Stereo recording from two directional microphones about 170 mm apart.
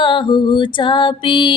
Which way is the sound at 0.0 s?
30° left (ahead or behind).